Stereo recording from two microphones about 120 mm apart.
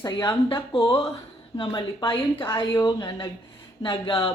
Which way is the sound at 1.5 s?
40° left (ahead or behind).